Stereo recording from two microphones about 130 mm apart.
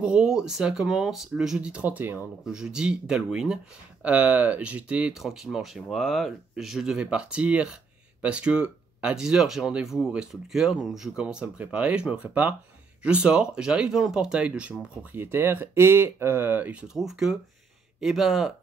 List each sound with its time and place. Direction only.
0.0 s speech: 5° right (ahead or behind)
16.9 s speech: 5° right (ahead or behind)